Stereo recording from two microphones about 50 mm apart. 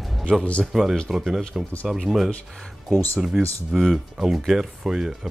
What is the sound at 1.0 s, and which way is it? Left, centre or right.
Speech, centre.